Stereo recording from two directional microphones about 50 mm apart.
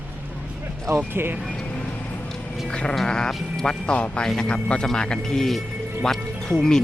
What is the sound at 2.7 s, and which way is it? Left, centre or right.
Sheep, centre.